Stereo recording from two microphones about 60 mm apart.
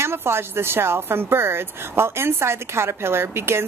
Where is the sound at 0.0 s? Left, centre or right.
Right.